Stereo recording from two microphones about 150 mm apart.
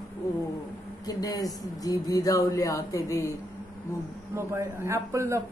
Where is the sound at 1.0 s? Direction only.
25° left (ahead or behind).